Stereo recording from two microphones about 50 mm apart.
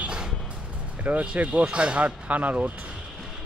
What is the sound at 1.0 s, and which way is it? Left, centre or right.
Speech, right.